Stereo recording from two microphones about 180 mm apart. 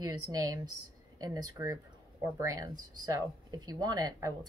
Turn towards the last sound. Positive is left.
turn(degrees=-20)  # may be behind; listen again after turning